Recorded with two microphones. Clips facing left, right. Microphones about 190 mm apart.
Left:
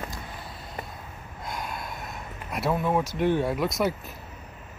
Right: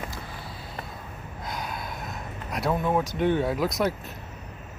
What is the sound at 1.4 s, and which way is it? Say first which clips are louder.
Gasp: even; centre (ahead or behind).